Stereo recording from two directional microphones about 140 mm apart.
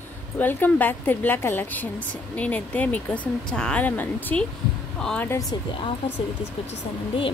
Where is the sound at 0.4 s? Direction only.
15° left (ahead or behind).